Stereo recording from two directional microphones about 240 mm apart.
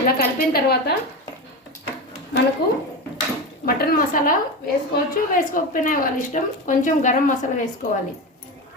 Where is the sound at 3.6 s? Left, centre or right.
Left.